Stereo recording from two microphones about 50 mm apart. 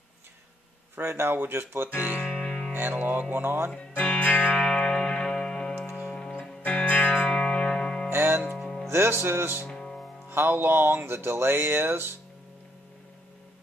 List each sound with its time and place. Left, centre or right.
0.9 s speech: right
2.2 s music: centre
2.7 s music: right
3.7 s speech: left
4.6 s music: centre
6.6 s music: left
8.1 s music: right
8.6 s music: centre
8.9 s music: right
9.7 s music: centre
10.3 s speech: right